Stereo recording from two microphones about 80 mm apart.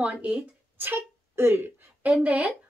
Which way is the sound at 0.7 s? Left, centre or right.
Right.